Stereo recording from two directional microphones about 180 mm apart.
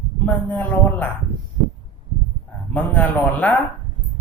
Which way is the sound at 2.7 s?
10° left (ahead or behind).